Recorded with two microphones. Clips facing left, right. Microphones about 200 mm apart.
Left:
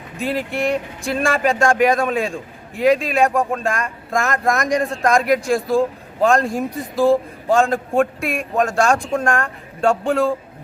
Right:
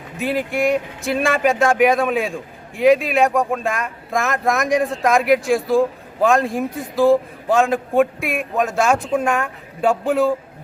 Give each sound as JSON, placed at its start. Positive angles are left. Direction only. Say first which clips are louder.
{"t": 0.2, "sound": "speech", "louder": "right 2 dB", "side_deg": 0}